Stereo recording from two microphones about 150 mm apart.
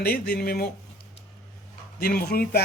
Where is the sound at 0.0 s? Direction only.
90° left.